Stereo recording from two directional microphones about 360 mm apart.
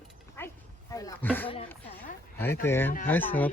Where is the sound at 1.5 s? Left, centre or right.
Centre.